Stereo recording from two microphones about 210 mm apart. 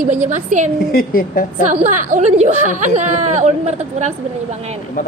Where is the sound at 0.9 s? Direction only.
45° left (ahead or behind).